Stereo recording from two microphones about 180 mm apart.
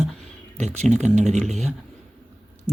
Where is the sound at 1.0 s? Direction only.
40° right (ahead or behind).